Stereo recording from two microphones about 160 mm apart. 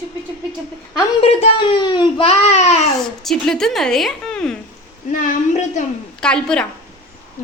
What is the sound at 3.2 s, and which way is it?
A woman's voice, 5° left (ahead or behind).